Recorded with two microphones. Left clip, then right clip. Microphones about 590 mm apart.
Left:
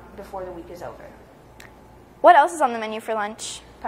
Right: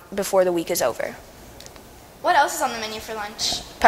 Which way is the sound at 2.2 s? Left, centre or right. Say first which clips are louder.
Left 5 dB; left.